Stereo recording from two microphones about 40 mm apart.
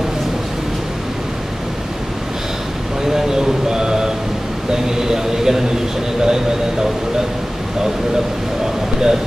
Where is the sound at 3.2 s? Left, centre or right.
Centre.